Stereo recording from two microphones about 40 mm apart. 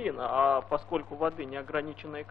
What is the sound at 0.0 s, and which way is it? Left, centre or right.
A man's voice, centre.